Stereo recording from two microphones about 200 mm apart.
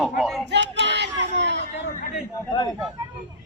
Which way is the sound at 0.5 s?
60° right (ahead or behind).